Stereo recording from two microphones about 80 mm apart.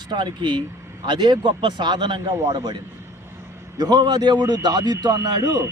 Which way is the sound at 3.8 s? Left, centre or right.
Right.